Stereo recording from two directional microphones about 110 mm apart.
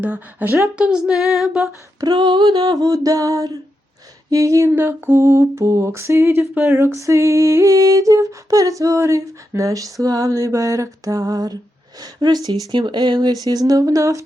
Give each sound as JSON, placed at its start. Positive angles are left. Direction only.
{"t": 0.0, "sound": "a woman's voice", "side_deg": -15}
{"t": 0.8, "sound": "female singing", "side_deg": -10}
{"t": 2.0, "sound": "a sound", "side_deg": -35}